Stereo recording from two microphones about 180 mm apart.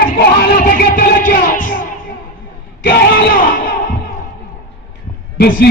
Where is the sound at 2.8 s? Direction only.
90° left.